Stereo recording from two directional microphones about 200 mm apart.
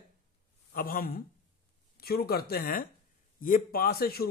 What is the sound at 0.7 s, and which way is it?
A man's voice, 45° left (ahead or behind).